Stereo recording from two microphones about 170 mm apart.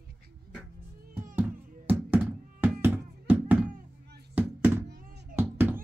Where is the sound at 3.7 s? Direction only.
75° right (ahead or behind).